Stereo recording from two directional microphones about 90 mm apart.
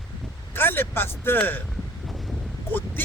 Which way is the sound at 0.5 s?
25° left (ahead or behind).